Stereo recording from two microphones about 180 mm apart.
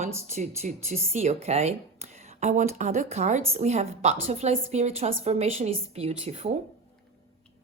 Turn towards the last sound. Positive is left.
turn(degrees=-35)  # may be behind; listen again after turning